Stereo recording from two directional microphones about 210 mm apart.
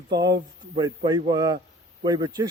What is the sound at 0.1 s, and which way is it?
Speech, 55° right (ahead or behind).